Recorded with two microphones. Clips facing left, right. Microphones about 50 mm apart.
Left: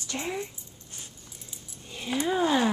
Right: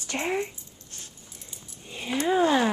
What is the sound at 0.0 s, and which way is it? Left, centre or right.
Speech, right.